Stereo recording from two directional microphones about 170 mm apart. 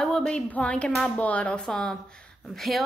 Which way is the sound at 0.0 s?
5° left (ahead or behind).